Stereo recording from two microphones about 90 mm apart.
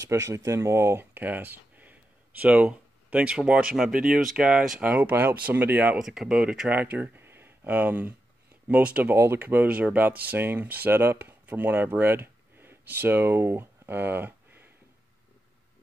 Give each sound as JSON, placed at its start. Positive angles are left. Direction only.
{"t": 0.0, "sound": "speech", "side_deg": -35}
{"t": 5.9, "sound": "speech", "side_deg": -5}
{"t": 6.7, "sound": "speech", "side_deg": -20}